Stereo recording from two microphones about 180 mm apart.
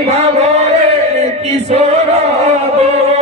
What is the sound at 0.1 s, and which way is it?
Music, 35° right (ahead or behind).